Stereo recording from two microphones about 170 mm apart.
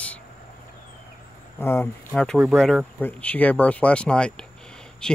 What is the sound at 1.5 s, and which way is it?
Speech, 15° left (ahead or behind).